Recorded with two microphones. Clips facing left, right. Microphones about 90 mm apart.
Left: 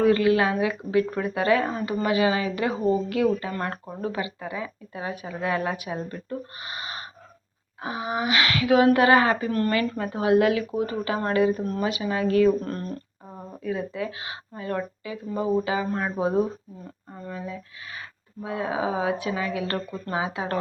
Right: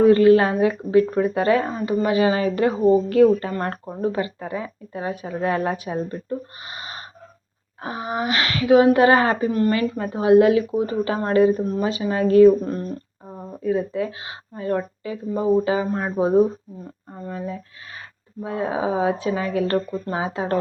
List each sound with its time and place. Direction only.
0.0 s speech: 35° right (ahead or behind)
7.8 s a sound: 35° right (ahead or behind)
8.1 s speech: 35° right (ahead or behind)
9.5 s speech: 20° right (ahead or behind)
17.3 s speech: 35° right (ahead or behind)